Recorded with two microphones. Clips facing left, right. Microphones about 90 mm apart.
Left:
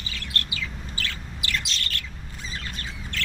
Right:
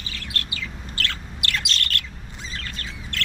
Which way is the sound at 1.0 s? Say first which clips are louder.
Right 4 dB; 65° right (ahead or behind).